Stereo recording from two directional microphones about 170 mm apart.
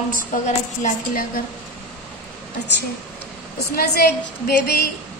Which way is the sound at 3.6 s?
65° left (ahead or behind).